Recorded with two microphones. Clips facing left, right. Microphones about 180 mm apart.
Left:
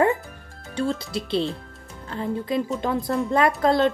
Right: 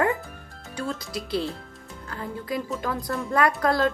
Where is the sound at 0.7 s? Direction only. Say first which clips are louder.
Left 5 dB; 30° left (ahead or behind).